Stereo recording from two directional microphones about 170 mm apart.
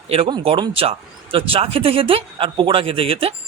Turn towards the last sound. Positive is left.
turn(degrees=-35)  # may be behind; listen again after turning